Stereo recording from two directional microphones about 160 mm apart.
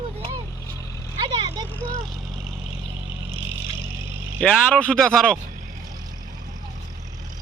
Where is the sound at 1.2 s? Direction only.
25° right (ahead or behind).